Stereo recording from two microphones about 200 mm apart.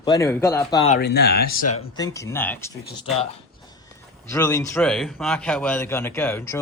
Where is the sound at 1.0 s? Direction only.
55° left (ahead or behind).